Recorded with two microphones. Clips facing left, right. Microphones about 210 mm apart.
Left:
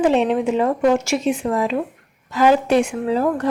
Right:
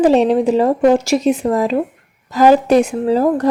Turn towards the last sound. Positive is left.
turn(degrees=-40)  # may be behind; listen again after turning